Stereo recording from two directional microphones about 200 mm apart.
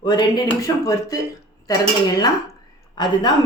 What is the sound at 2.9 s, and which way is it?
Speech, 20° left (ahead or behind).